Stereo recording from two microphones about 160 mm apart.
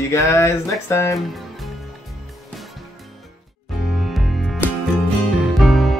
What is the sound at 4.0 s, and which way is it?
Music, centre (ahead or behind).